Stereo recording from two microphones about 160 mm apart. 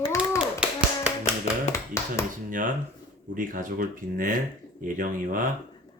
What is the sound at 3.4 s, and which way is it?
Speech, 60° right (ahead or behind).